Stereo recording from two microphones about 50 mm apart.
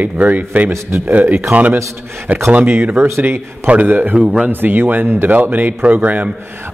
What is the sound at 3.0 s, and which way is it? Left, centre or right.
Speech, right.